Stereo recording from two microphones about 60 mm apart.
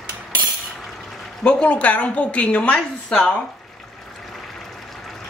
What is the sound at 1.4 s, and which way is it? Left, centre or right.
A woman's voice, centre.